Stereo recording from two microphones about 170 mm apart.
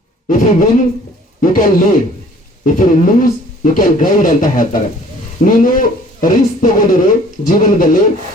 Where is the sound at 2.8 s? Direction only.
50° left (ahead or behind).